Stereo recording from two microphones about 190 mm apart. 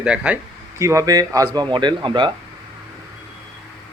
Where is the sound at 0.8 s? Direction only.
15° right (ahead or behind).